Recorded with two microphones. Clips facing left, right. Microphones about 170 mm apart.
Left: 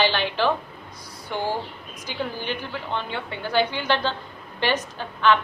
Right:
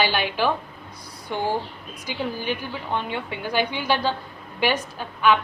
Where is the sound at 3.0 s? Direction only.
15° right (ahead or behind).